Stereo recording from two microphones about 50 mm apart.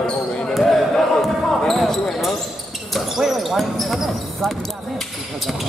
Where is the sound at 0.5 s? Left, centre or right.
Centre.